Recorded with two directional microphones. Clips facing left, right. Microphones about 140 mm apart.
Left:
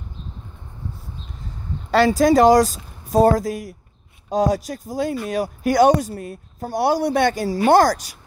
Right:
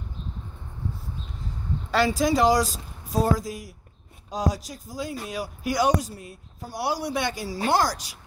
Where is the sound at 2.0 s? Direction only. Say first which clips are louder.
Left 8 dB; 50° left (ahead or behind).